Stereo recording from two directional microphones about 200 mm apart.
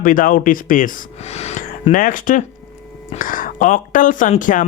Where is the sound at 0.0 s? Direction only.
45° left (ahead or behind).